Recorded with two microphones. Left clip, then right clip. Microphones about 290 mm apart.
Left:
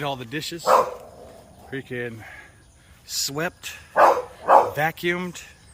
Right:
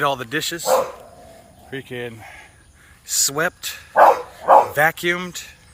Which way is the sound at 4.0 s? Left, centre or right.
Right.